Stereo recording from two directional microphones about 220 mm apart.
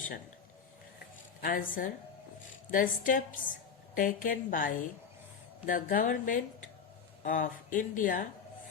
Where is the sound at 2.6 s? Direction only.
40° left (ahead or behind).